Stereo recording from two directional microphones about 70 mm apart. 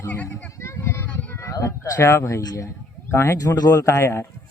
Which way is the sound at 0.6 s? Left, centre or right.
Left.